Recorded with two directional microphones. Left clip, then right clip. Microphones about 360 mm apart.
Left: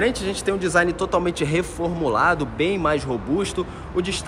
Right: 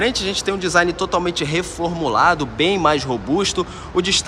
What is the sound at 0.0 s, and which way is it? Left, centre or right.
Speech, centre.